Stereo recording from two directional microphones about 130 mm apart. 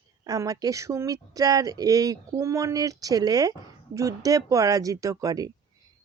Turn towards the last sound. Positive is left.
turn(degrees=-30)  # may be behind; listen again after turning